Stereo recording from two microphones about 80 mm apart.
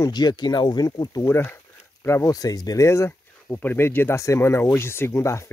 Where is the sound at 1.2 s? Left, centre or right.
Left.